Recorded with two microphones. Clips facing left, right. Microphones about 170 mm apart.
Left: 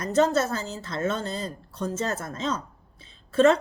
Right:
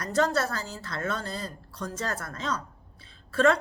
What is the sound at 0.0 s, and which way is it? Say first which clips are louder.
A woman's voice: left 4 dB; 20° left (ahead or behind).